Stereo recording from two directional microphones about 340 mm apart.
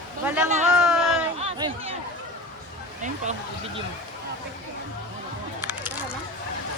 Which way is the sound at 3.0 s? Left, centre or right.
Right.